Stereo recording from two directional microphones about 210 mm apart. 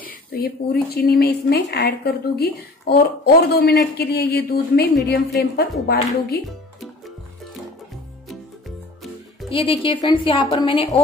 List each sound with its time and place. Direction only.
0.0 s speech: 50° left (ahead or behind)
9.5 s a woman's voice: 25° left (ahead or behind)